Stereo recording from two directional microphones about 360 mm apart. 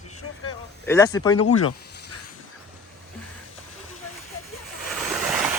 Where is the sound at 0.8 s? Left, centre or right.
Centre.